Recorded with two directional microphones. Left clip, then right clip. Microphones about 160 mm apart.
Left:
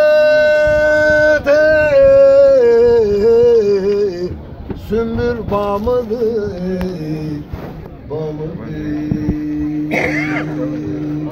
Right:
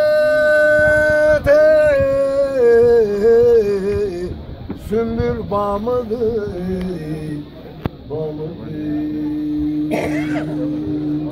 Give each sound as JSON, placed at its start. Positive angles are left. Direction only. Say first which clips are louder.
{"t": 0.0, "sound": "a sound", "louder": "left 4 dB", "side_deg": 5}
{"t": 4.9, "sound": "male singing", "louder": "left 2 dB", "side_deg": 0}
{"t": 10.0, "sound": "speech", "louder": "left 3 dB", "side_deg": -55}